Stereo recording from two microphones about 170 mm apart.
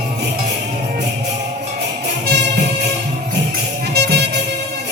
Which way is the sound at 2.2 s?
80° right.